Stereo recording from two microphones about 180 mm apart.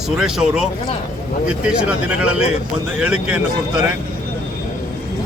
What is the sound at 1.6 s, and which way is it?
Speech, 5° right (ahead or behind).